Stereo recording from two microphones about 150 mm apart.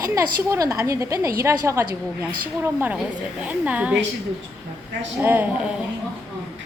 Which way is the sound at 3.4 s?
10° right (ahead or behind).